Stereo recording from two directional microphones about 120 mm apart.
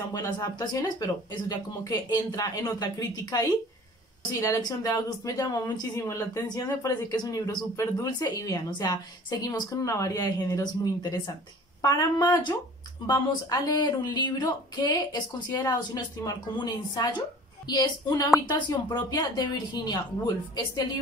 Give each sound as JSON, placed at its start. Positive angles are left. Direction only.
{"t": 0.1, "sound": "speech", "side_deg": 30}